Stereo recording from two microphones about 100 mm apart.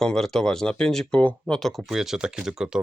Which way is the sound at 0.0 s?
5° left (ahead or behind).